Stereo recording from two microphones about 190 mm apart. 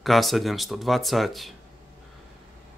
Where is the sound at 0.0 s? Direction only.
Centre (ahead or behind).